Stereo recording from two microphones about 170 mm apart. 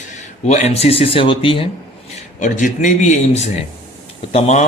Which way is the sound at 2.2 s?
45° left (ahead or behind).